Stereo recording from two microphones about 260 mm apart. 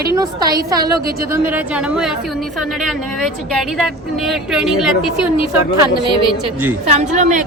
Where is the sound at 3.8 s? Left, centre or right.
Centre.